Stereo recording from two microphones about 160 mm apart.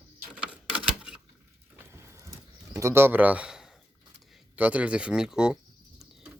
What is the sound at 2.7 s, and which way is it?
Speech, 15° right (ahead or behind).